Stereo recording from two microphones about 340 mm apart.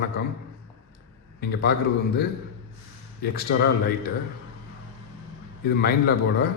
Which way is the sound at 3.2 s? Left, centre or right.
Left.